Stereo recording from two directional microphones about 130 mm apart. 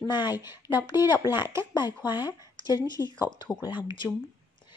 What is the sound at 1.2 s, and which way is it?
Speech, 30° left (ahead or behind).